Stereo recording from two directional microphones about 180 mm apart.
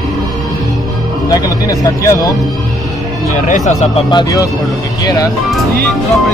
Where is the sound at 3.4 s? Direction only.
45° left (ahead or behind).